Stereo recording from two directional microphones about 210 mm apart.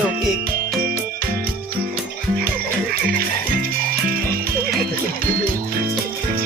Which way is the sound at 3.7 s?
45° right (ahead or behind).